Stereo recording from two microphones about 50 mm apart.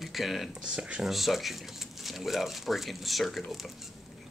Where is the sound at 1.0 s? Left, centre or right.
Centre.